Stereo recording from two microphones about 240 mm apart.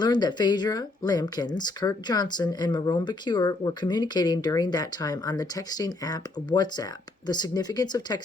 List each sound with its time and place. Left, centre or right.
0.0 s speech: centre